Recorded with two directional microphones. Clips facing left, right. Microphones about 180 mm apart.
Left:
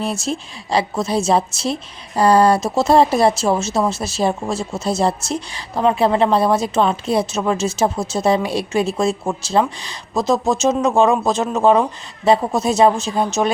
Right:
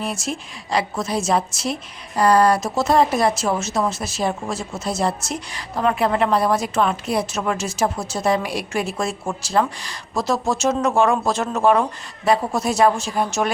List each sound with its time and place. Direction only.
0.0 s a woman's voice: 30° left (ahead or behind)